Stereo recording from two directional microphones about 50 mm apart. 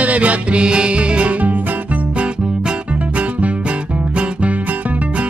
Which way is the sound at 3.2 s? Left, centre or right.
Right.